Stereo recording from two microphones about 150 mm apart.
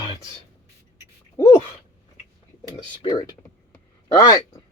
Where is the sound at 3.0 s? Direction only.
25° left (ahead or behind).